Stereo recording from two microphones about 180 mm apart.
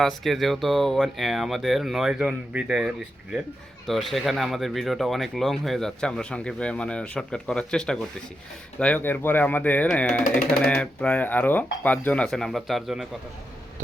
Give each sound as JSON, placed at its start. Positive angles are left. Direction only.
{"t": 0.0, "sound": "speech", "side_deg": 0}